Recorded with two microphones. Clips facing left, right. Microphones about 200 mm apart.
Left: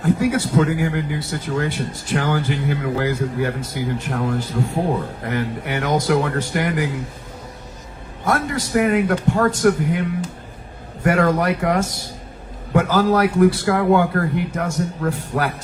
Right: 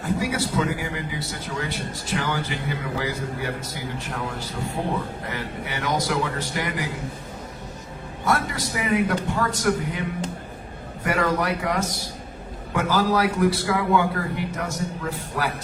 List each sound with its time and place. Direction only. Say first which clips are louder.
0.2 s a man's voice: left 6 dB; 55° left (ahead or behind)
8.2 s a man's voice: left 3 dB; 55° left (ahead or behind)